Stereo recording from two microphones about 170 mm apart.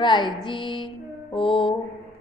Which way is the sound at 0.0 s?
25° left (ahead or behind).